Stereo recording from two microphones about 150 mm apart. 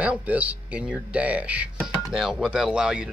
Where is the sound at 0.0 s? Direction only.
10° right (ahead or behind).